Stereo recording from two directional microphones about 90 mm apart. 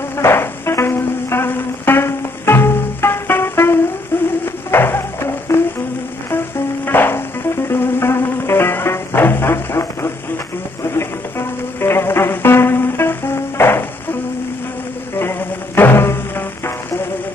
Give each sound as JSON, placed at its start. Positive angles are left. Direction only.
{"t": 0.2, "sound": "music", "side_deg": 30}
{"t": 4.1, "sound": "a sound", "side_deg": 25}
{"t": 4.6, "sound": "music", "side_deg": 25}
{"t": 6.9, "sound": "music", "side_deg": 25}
{"t": 15.1, "sound": "music", "side_deg": 25}